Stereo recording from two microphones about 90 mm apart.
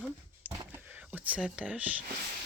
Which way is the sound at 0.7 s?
20° right (ahead or behind).